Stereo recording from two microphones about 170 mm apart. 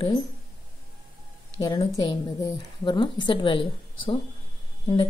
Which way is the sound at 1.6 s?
25° left (ahead or behind).